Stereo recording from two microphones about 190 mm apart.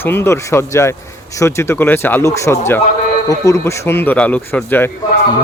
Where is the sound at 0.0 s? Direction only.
10° left (ahead or behind).